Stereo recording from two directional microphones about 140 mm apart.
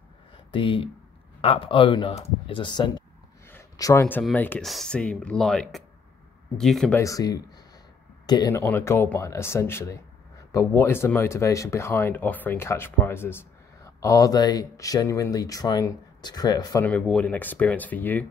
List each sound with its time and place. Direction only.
0.5 s a man's voice: 40° left (ahead or behind)
3.4 s a sound: 20° left (ahead or behind)
4.2 s speech: 10° left (ahead or behind)
6.9 s speech: 20° left (ahead or behind)
17.0 s speech: 5° left (ahead or behind)